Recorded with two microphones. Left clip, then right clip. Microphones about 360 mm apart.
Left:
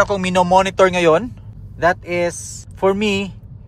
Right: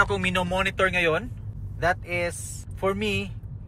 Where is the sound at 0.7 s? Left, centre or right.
Left.